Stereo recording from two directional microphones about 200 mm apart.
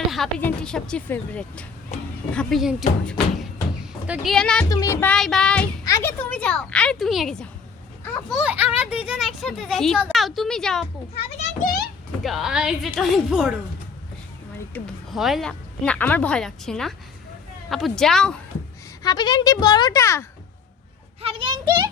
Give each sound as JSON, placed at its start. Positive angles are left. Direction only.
{"t": 0.1, "sound": "a child's voice", "side_deg": 5}
{"t": 4.0, "sound": "a child's voice", "side_deg": -5}
{"t": 4.7, "sound": "a child's voice", "side_deg": 15}
{"t": 11.3, "sound": "a child's voice", "side_deg": 45}
{"t": 12.2, "sound": "a child's voice", "side_deg": 0}
{"t": 14.7, "sound": "a woman's voice", "side_deg": 0}
{"t": 19.0, "sound": "speech", "side_deg": 20}
{"t": 21.2, "sound": "a child's voice", "side_deg": -30}